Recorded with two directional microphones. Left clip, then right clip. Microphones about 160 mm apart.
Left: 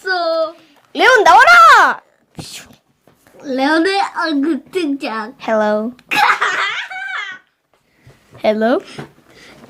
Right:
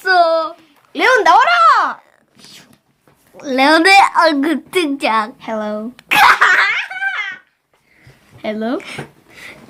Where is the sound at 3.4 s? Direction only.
50° right (ahead or behind).